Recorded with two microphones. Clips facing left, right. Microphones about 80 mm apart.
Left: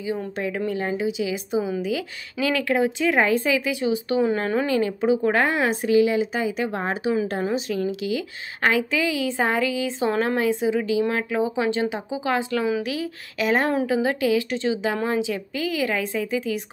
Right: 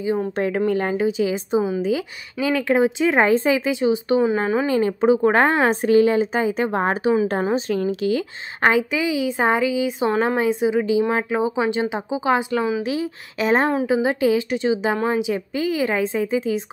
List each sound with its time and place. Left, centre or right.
0.0 s a woman's voice: right
0.4 s a woman's voice: right
4.2 s speech: centre
4.7 s a woman's voice: right